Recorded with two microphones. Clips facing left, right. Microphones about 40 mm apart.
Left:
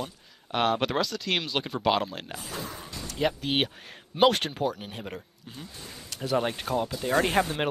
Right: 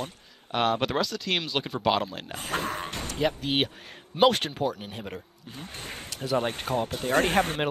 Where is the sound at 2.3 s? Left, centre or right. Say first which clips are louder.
Right 11 dB; right.